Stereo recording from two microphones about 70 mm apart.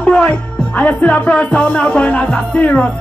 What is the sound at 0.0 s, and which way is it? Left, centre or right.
Music, centre.